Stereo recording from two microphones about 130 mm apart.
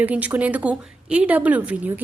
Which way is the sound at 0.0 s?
10° right (ahead or behind).